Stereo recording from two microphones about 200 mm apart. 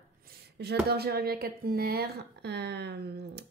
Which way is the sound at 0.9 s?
55° right (ahead or behind).